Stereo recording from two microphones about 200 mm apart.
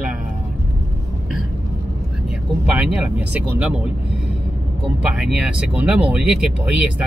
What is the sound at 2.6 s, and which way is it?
Speech, 5° right (ahead or behind).